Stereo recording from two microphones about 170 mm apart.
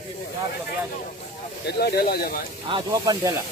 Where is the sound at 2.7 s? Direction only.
25° right (ahead or behind).